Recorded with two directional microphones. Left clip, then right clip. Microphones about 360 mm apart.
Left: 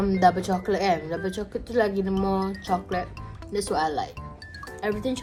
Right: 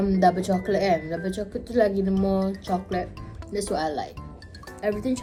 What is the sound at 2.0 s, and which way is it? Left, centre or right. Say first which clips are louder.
Speech: right 1 dB; centre.